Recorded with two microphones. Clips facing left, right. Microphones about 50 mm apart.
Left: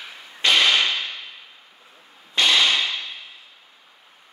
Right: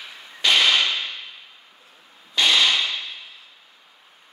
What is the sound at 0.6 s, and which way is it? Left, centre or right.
Whip, centre.